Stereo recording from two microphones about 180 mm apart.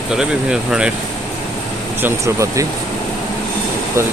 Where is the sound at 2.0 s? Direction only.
15° right (ahead or behind).